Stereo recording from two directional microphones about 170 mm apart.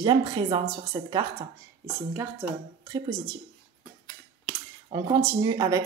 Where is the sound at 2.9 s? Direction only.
25° right (ahead or behind).